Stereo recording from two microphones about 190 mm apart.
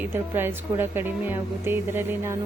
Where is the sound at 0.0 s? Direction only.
10° right (ahead or behind).